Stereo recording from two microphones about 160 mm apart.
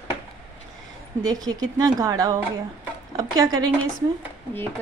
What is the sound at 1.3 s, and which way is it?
Speech, 20° right (ahead or behind).